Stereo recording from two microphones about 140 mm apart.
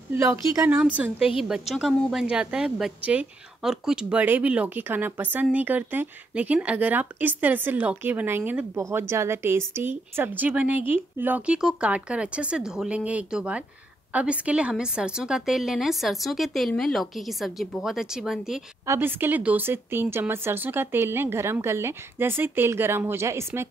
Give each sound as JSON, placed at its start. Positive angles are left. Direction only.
{"t": 0.1, "sound": "a woman's voice", "side_deg": -15}
{"t": 18.9, "sound": "a woman's voice", "side_deg": -15}